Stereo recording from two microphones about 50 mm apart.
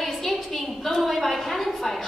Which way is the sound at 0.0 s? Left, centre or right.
Centre.